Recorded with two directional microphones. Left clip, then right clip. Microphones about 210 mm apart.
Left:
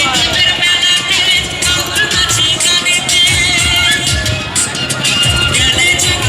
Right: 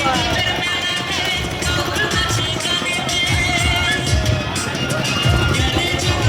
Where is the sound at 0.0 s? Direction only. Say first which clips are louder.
Left 7 dB; 45° right (ahead or behind).